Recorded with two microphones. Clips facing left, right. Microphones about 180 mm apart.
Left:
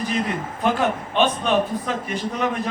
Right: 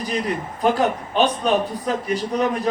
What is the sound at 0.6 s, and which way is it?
A man's voice, 40° right (ahead or behind).